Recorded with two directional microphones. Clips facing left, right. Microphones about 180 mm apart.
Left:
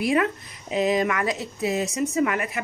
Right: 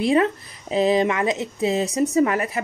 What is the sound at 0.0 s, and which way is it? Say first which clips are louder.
Speech: right 4 dB; 30° right (ahead or behind).